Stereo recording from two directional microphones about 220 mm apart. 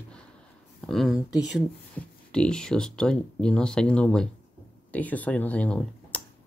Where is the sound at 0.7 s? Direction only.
Centre (ahead or behind).